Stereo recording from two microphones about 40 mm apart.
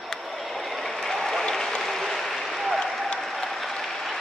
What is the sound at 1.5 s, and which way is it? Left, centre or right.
Applause, centre.